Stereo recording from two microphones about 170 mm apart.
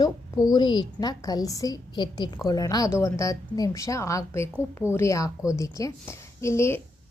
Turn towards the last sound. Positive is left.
turn(degrees=15)  # may be behind; listen again after turning